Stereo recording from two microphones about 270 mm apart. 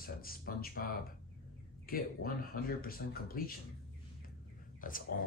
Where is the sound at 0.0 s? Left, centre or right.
Left.